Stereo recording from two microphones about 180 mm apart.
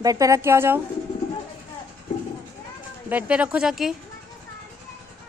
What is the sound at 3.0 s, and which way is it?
Speech, 10° right (ahead or behind).